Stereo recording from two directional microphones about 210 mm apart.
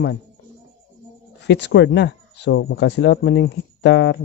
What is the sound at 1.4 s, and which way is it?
Speech, 55° left (ahead or behind).